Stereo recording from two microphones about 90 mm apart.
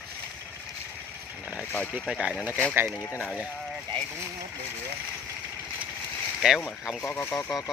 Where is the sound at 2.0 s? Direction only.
5° right (ahead or behind).